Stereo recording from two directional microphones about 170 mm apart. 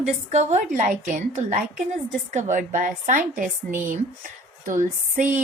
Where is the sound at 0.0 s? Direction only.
40° right (ahead or behind).